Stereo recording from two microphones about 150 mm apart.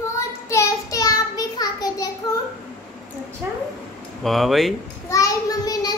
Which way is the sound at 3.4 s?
10° right (ahead or behind).